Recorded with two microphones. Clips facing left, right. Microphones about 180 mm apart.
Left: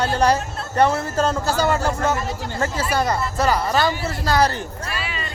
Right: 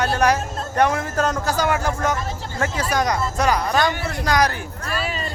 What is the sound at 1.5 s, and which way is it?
Speech, 15° right (ahead or behind).